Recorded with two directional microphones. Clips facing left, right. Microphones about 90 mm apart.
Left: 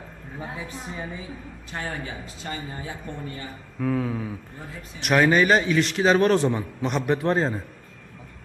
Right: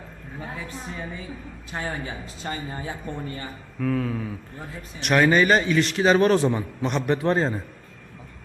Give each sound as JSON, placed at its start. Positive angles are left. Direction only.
{"t": 0.3, "sound": "a woman's voice", "side_deg": 15}
{"t": 1.7, "sound": "a man's voice", "side_deg": -15}
{"t": 2.4, "sound": "speech", "side_deg": -35}
{"t": 3.8, "sound": "a woman's voice", "side_deg": 10}